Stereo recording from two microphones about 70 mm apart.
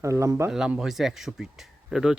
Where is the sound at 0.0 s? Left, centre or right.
Right.